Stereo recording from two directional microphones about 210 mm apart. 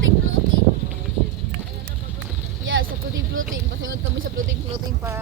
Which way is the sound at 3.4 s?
70° right (ahead or behind).